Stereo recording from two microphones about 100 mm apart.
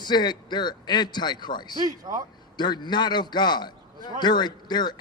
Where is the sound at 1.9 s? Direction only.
40° right (ahead or behind).